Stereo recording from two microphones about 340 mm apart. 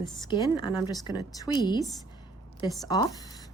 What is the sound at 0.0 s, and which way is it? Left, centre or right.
A woman's voice, centre.